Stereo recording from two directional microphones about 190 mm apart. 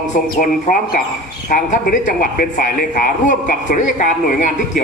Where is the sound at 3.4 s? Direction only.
45° left (ahead or behind).